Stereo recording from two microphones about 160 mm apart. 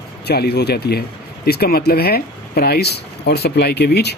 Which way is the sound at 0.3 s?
85° left.